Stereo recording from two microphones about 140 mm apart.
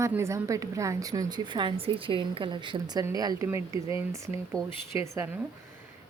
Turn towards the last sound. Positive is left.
turn(degrees=-20)  # may be behind; listen again after turning